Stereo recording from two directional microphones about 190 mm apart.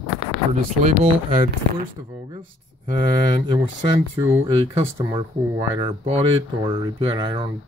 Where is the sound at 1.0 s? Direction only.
30° right (ahead or behind).